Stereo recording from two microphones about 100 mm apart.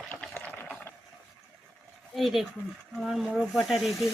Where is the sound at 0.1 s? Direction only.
15° left (ahead or behind).